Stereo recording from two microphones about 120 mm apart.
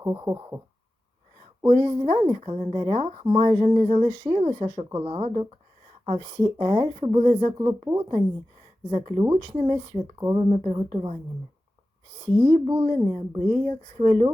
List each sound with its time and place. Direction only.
0.0 s speech: 35° right (ahead or behind)
1.6 s a woman's voice: 55° right (ahead or behind)
1.9 s a woman's voice: 45° right (ahead or behind)
6.3 s speech: 40° right (ahead or behind)
7.2 s speech: 55° right (ahead or behind)
8.9 s speech: 50° right (ahead or behind)
10.3 s a woman's voice: 50° right (ahead or behind)
12.2 s speech: 50° right (ahead or behind)